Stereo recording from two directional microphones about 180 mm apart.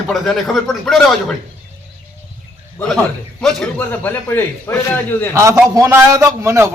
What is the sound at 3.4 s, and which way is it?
A man's voice, 5° left (ahead or behind).